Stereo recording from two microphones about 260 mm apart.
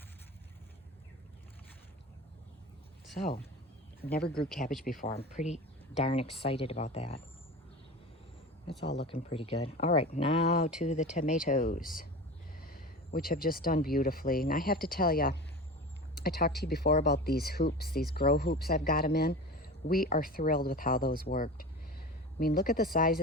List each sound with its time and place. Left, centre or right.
3.2 s speech: left
9.3 s speech: left